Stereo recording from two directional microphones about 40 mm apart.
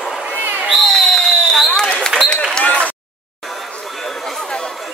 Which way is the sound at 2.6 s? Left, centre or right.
Left.